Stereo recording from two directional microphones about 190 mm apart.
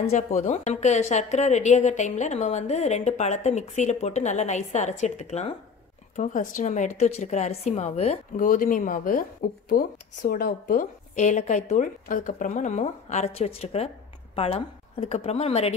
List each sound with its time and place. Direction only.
0.0 s a woman's voice: 35° left (ahead or behind)